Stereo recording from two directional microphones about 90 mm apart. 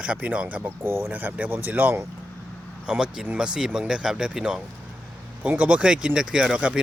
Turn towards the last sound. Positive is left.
turn(degrees=-5)  # may be behind; listen again after turning